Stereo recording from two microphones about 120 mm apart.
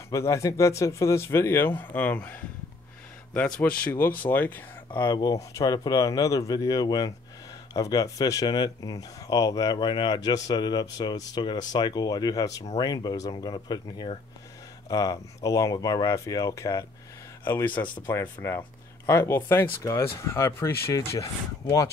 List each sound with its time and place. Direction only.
0.1 s speech: 25° left (ahead or behind)
3.3 s speech: 10° left (ahead or behind)
5.1 s speech: 30° left (ahead or behind)